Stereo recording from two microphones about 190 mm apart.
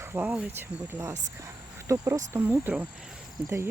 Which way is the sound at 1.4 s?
15° right (ahead or behind).